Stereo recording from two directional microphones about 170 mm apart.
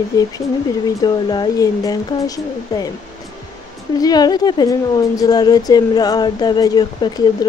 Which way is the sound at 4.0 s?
25° left (ahead or behind).